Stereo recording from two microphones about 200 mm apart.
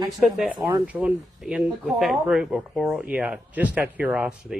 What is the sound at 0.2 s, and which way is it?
Speech, centre (ahead or behind).